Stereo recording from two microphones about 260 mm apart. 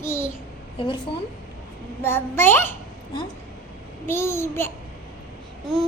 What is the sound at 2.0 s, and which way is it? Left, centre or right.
Speech, centre.